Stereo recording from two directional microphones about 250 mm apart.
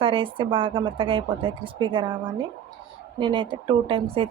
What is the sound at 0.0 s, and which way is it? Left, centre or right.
Speech, right.